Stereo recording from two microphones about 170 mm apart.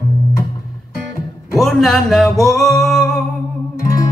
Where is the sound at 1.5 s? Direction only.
Centre (ahead or behind).